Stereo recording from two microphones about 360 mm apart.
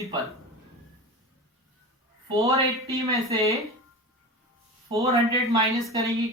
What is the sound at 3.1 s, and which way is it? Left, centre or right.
Speech, centre.